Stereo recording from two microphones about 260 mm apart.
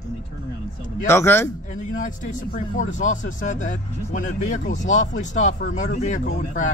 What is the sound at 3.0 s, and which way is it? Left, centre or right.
Speech, left.